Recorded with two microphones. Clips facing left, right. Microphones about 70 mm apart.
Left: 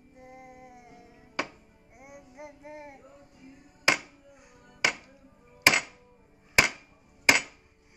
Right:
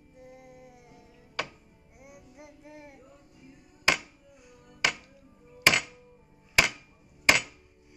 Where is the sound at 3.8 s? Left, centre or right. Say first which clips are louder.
Left 1 dB; centre.